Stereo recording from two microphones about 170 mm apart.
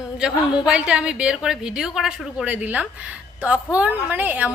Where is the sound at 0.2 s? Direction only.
5° right (ahead or behind).